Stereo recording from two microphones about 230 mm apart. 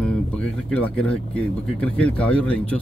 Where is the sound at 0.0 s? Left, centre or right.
Centre.